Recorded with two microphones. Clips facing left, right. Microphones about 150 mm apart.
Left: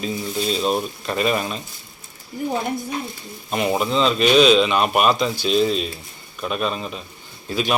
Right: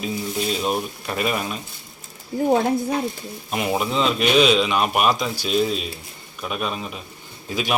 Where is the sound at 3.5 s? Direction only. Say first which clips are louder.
Left 2 dB; 5° right (ahead or behind).